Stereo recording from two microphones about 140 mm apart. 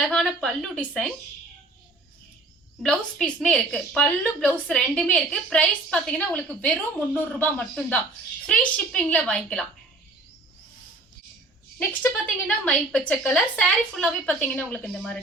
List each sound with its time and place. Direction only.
0.0 s a woman's voice: centre (ahead or behind)
2.8 s a woman's voice: 5° left (ahead or behind)
11.8 s a woman's voice: 15° left (ahead or behind)